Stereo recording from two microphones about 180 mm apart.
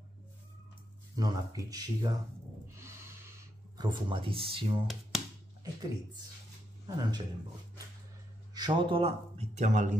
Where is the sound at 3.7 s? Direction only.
25° right (ahead or behind).